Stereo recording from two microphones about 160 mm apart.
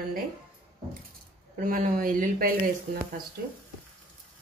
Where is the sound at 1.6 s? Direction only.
55° right (ahead or behind).